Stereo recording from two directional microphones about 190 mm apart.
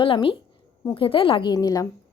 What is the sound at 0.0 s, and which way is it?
A woman's voice, 30° left (ahead or behind).